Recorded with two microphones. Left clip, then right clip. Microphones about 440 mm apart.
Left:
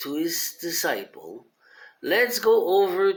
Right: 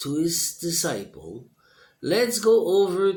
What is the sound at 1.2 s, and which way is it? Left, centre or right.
Speech, right.